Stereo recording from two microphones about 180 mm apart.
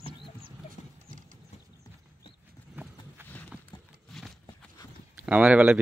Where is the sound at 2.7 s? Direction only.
10° right (ahead or behind).